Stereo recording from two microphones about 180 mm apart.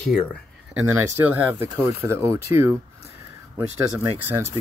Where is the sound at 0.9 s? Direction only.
10° right (ahead or behind).